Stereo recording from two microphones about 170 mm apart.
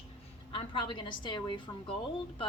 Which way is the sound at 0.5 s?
30° left (ahead or behind).